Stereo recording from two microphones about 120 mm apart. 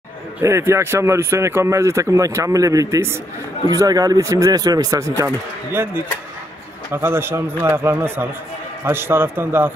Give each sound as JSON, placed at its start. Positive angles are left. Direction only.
{"t": 0.4, "sound": "speech", "side_deg": -20}